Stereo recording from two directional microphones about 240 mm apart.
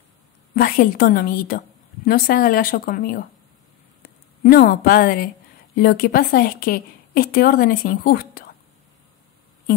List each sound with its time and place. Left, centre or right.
0.6 s a woman's voice: left